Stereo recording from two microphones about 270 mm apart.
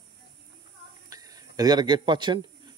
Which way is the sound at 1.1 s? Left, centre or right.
Centre.